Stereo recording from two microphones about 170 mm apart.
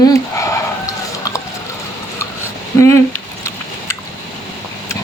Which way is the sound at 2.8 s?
15° left (ahead or behind).